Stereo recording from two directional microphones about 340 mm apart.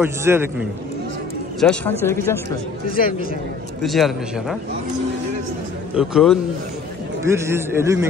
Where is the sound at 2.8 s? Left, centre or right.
Left.